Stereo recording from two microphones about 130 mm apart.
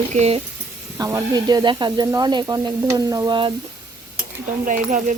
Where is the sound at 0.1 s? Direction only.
55° right (ahead or behind).